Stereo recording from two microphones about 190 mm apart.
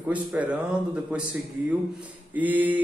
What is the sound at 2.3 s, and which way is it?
Speech, 10° right (ahead or behind).